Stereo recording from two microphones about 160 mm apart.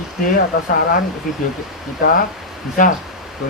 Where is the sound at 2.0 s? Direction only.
55° left (ahead or behind).